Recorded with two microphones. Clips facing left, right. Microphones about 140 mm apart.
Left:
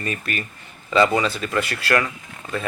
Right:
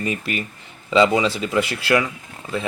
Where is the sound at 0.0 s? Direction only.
15° right (ahead or behind).